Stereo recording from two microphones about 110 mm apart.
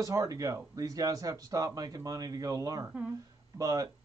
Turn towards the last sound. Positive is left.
turn(degrees=-35)  # may be behind; listen again after turning